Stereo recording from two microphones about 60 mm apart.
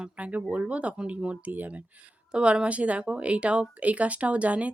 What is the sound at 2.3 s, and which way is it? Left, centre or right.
Speech, centre.